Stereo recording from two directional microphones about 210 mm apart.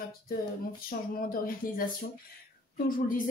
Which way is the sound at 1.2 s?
40° left (ahead or behind).